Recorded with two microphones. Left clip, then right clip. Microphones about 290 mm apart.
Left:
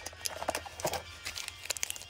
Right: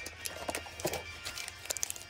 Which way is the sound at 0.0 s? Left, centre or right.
Centre.